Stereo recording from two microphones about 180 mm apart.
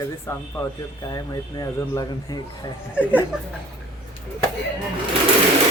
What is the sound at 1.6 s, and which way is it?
Speech, 20° left (ahead or behind).